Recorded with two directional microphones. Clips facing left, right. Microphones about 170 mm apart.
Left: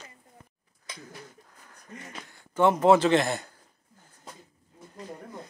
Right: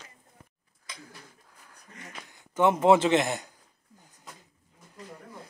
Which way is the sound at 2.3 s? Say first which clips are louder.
Left 1 dB; 15° right (ahead or behind).